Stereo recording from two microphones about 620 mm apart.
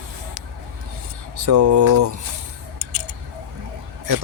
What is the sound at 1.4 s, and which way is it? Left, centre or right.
Speech, right.